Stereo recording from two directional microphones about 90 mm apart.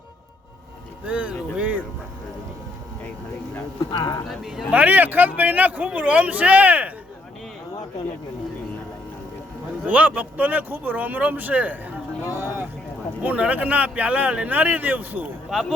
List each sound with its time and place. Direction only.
1.0 s music: 15° right (ahead or behind)
3.9 s speech: 50° left (ahead or behind)
4.3 s speech: 5° right (ahead or behind)
4.7 s speech: 20° right (ahead or behind)
9.8 s speech: 15° right (ahead or behind)
13.2 s speech: 15° right (ahead or behind)
15.5 s speech: 5° right (ahead or behind)